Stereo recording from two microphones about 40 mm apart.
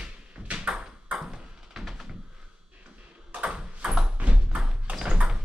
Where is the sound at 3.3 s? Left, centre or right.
Right.